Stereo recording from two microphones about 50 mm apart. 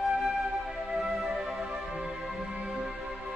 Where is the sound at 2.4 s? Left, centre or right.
Right.